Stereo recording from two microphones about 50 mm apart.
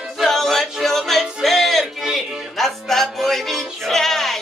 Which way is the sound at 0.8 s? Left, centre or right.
Centre.